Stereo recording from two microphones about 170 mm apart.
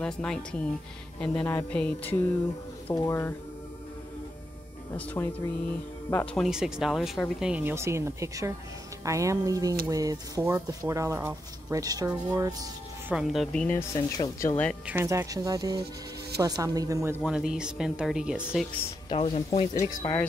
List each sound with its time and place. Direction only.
0.0 s speech: 5° left (ahead or behind)
1.2 s music: 10° left (ahead or behind)
4.9 s music: 15° left (ahead or behind)
6.3 s speech: centre (ahead or behind); by 12.6 s 20° right (ahead or behind)
13.1 s speech: 5° right (ahead or behind)
13.7 s speech: 20° left (ahead or behind)
14.9 s speech: 15° right (ahead or behind)
17.2 s speech: 5° right (ahead or behind)
19.0 s speech: 35° left (ahead or behind)
19.7 s music: 20° left (ahead or behind)